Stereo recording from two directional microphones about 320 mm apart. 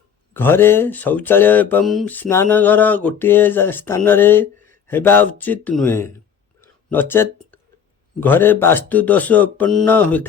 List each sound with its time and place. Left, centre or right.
0.3 s speech: centre